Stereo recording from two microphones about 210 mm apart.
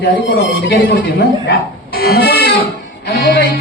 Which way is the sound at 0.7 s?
45° left (ahead or behind).